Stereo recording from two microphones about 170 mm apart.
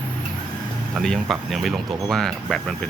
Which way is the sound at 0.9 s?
Centre (ahead or behind).